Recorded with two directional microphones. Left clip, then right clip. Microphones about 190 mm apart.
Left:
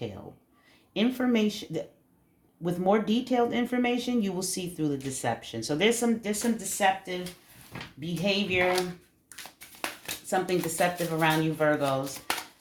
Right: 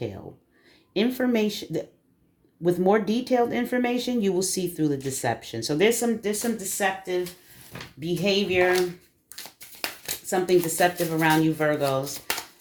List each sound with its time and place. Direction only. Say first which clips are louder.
0.9 s speech: right 3 dB; 35° right (ahead or behind)
9.4 s a sound: right 3 dB; 25° right (ahead or behind)
10.2 s speech: right 6 dB; 35° right (ahead or behind)